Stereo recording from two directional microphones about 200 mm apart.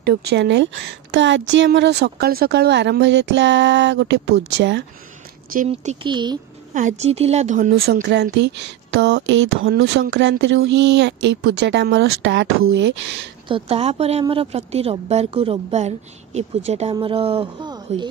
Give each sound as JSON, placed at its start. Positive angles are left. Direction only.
{"t": 0.0, "sound": "speech", "side_deg": -55}
{"t": 5.7, "sound": "a woman's voice", "side_deg": -25}
{"t": 6.7, "sound": "speech", "side_deg": -40}
{"t": 13.5, "sound": "a woman's voice", "side_deg": -30}